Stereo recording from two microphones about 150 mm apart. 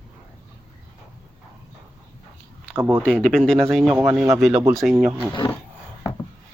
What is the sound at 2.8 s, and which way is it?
Speech, 15° right (ahead or behind).